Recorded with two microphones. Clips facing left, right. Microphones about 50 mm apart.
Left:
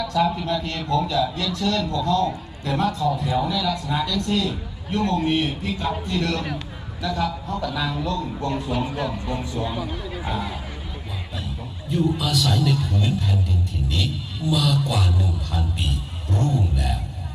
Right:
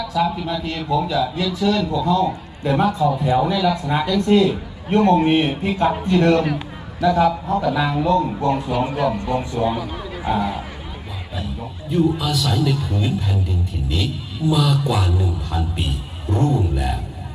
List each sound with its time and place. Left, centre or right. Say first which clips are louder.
0.0 s a man's voice: right 1 dB; centre
10.2 s a man's voice: right 9 dB; centre